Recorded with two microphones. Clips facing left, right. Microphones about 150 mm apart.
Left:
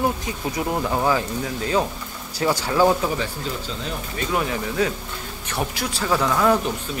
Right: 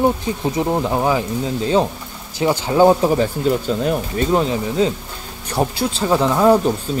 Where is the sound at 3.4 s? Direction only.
55° right (ahead or behind).